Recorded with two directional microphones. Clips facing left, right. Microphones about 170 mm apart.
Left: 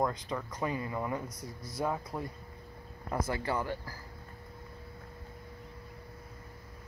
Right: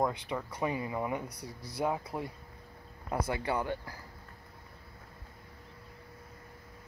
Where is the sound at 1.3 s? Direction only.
65° right (ahead or behind).